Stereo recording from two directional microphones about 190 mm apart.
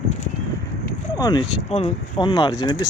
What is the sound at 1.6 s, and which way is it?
Speech, 30° left (ahead or behind).